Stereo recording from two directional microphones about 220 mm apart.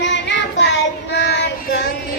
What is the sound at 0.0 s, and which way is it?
Child singing, 55° left (ahead or behind).